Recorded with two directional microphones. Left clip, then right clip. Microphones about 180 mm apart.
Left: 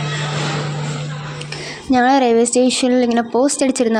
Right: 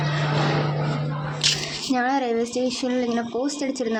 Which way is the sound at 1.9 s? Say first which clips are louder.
Left 10 dB; 40° left (ahead or behind).